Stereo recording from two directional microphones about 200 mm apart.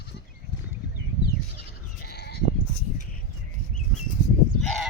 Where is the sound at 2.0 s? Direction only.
50° left (ahead or behind).